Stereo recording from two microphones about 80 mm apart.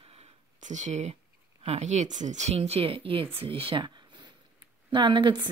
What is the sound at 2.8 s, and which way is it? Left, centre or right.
Speech, right.